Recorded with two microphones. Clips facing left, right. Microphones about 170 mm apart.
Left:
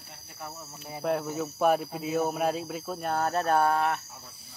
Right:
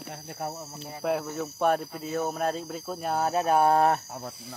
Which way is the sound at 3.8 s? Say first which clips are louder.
Right 5 dB; 40° right (ahead or behind).